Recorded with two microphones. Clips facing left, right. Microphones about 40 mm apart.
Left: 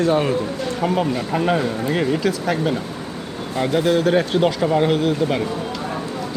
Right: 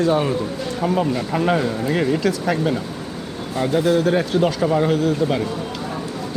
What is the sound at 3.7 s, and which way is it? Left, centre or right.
Speech, left.